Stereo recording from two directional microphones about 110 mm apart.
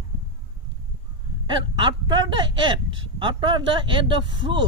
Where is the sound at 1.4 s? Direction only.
45° right (ahead or behind).